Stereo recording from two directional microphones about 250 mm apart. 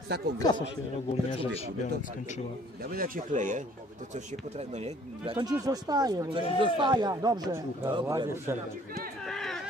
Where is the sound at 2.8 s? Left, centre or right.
Right; by 8.5 s centre.